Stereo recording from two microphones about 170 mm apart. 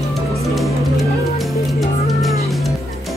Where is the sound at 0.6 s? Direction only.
Centre (ahead or behind).